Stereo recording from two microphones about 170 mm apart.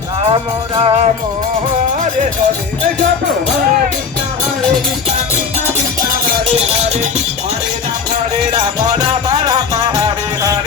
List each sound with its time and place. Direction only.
0.2 s music: 35° right (ahead or behind)
6.5 s music: 40° right (ahead or behind)